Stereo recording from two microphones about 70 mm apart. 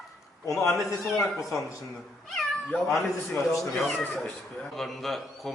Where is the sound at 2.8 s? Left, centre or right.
Left.